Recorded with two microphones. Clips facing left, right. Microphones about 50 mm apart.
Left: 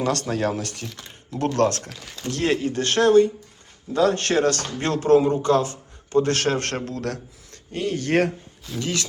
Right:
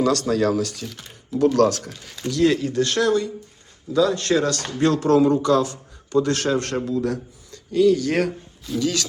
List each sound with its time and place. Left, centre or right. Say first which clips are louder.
0.0 s a man's voice: right 4 dB; left
8.8 s speech: right 3 dB; left